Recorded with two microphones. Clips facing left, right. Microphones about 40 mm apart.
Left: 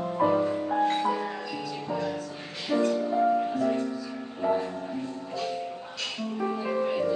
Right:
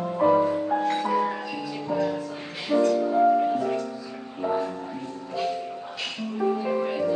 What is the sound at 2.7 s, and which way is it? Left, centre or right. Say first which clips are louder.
Music: right 4 dB; centre.